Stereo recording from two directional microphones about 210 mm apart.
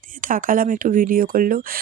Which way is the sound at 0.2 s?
40° right (ahead or behind).